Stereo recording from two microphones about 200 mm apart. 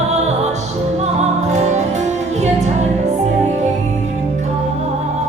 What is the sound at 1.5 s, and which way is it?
Music, 35° right (ahead or behind).